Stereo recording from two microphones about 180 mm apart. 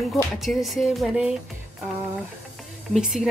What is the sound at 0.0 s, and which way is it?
A woman's voice, centre (ahead or behind).